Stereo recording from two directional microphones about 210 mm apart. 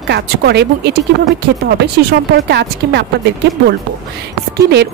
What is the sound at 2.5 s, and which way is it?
Speech, 55° right (ahead or behind).